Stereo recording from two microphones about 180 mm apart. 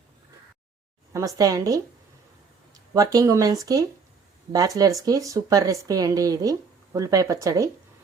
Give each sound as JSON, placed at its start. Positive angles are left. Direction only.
{"t": 1.1, "sound": "speech", "side_deg": -20}